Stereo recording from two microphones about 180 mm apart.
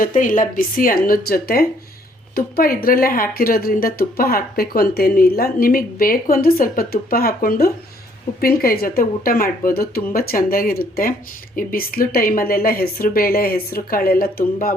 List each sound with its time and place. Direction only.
0.0 s a woman's voice: 45° left (ahead or behind)